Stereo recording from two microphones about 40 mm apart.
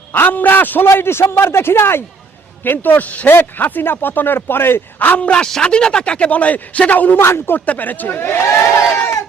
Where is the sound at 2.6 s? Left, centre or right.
Left.